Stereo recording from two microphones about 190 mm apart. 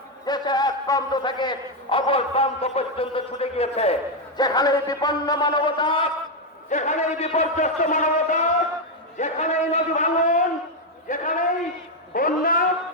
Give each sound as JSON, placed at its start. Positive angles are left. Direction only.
{"t": 0.3, "sound": "a man's voice", "side_deg": 20}
{"t": 4.4, "sound": "a man's voice", "side_deg": 20}
{"t": 6.7, "sound": "a man's voice", "side_deg": 40}